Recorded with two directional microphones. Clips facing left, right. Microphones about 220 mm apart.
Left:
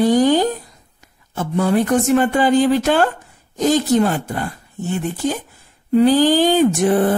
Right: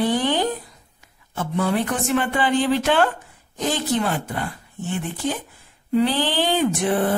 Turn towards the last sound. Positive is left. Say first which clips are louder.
# left 5 dB
turn(degrees=45)  # may be behind; listen again after turning